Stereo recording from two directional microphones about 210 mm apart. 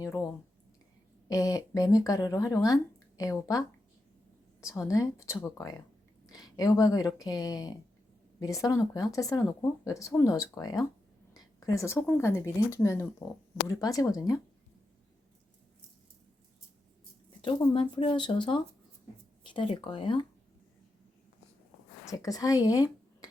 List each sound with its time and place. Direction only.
0.0 s speech: 15° left (ahead or behind)
1.3 s speech: 15° left (ahead or behind)
4.6 s speech: 15° left (ahead or behind)
17.4 s speech: 25° left (ahead or behind)
22.1 s speech: 15° left (ahead or behind)